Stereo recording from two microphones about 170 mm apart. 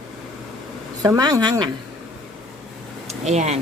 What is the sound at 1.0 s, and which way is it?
Speech, 20° right (ahead or behind).